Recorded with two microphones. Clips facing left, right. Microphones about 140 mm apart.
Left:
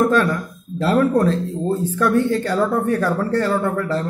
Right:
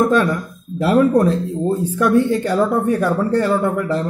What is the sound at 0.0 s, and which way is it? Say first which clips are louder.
Speech: right 1 dB; 15° right (ahead or behind).